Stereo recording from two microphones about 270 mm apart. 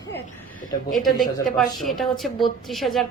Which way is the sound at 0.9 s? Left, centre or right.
Centre.